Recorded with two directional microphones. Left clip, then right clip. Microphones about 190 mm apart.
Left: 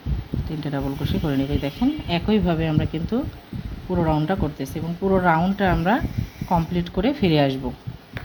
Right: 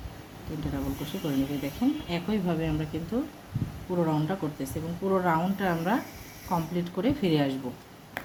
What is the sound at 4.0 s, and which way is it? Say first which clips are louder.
Speech: left 6 dB; 35° left (ahead or behind).